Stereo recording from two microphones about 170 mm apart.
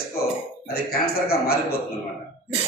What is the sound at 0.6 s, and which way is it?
A man's voice, 65° left (ahead or behind).